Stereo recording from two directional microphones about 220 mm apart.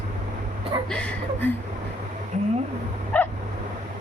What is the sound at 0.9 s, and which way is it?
Speech, 5° left (ahead or behind).